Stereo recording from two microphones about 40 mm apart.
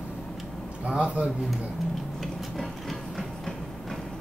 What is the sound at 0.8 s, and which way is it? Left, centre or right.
Speech, right.